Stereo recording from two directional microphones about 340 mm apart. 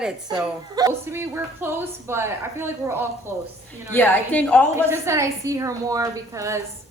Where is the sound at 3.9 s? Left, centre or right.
Centre.